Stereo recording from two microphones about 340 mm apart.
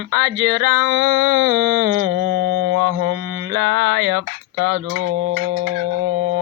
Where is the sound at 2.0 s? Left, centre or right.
Right.